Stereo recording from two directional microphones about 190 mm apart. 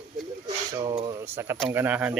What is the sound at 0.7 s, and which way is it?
Speech, 25° right (ahead or behind).